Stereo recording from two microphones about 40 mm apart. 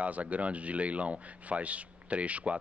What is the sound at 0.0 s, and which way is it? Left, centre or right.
Speech, right.